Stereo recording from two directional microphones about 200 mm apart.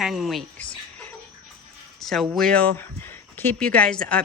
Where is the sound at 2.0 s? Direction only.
Centre (ahead or behind).